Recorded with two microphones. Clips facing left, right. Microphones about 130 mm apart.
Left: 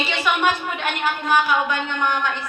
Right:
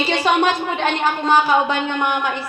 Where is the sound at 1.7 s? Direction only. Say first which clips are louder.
Right 3 dB; 20° right (ahead or behind).